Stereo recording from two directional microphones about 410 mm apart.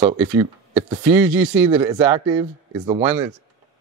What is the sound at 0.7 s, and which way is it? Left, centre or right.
Speech, centre.